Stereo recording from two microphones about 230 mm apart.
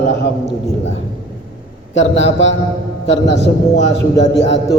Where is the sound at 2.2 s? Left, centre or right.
Left.